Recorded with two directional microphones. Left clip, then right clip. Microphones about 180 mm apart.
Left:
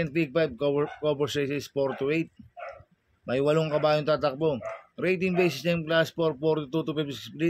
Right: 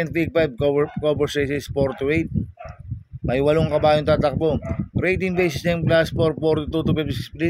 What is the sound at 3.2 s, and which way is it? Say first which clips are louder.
Speech: right 6 dB; 45° right (ahead or behind).